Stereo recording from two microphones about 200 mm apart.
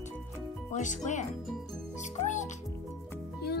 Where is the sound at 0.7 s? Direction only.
35° left (ahead or behind).